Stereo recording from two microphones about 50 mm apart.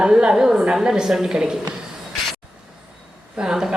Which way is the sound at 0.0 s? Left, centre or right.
Centre.